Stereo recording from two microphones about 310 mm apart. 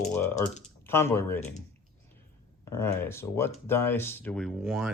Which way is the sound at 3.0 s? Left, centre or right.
Centre.